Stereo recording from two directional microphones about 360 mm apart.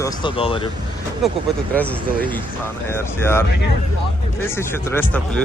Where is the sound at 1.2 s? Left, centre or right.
Centre.